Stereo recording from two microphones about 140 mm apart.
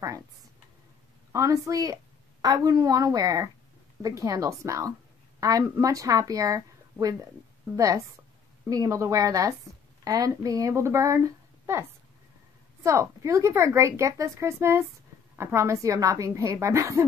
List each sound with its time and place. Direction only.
1.3 s a woman's voice: 20° right (ahead or behind)
12.8 s a woman's voice: 20° right (ahead or behind)